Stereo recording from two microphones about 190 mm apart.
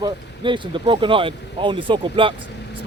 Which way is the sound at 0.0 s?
25° right (ahead or behind).